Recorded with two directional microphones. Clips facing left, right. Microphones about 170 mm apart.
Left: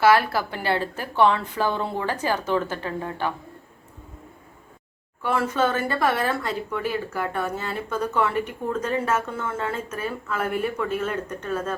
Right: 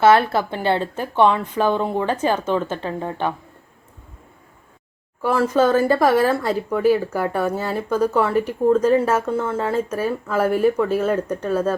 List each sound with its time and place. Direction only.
0.0 s speech: 25° right (ahead or behind)
5.2 s speech: 40° right (ahead or behind)